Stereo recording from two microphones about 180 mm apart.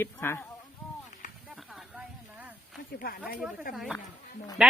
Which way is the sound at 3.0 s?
55° left (ahead or behind).